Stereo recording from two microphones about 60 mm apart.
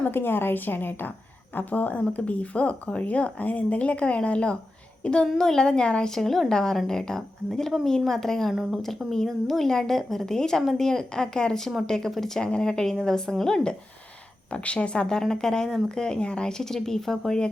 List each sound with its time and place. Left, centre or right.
0.0 s a woman's voice: left; by 4.5 s centre
5.2 s a woman's voice: centre